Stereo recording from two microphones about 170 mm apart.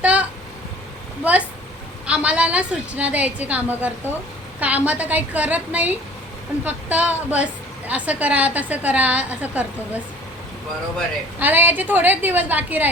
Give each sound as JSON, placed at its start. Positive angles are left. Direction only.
{"t": 0.0, "sound": "a sound", "side_deg": -5}
{"t": 1.2, "sound": "a woman's voice", "side_deg": -10}
{"t": 11.3, "sound": "a woman's voice", "side_deg": -10}